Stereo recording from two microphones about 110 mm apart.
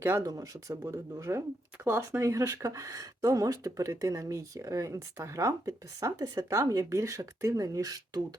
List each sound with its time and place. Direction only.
0.0 s speech: 20° right (ahead or behind)
0.3 s speech: 35° right (ahead or behind)